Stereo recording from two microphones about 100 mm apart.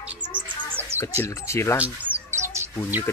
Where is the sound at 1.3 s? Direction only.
30° left (ahead or behind).